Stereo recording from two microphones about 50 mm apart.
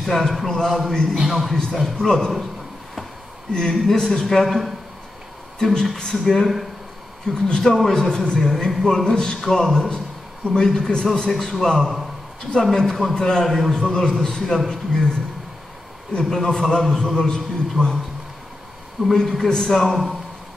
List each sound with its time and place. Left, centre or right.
0.0 s a man's voice: centre
3.5 s a man's voice: centre
11.8 s a man's voice: centre
12.7 s a man's voice: centre
16.2 s a man's voice: centre
19.1 s speech: centre